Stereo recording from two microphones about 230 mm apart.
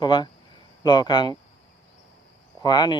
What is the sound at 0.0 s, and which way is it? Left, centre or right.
Speech, centre.